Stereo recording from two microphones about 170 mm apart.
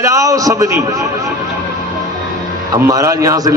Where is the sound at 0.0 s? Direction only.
20° right (ahead or behind).